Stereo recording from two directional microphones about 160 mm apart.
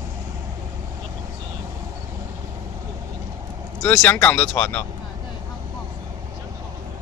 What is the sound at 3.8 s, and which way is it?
Speech, 5° left (ahead or behind).